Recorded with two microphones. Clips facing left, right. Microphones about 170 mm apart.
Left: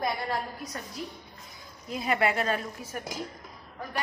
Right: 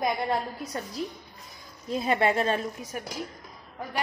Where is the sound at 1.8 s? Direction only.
30° right (ahead or behind).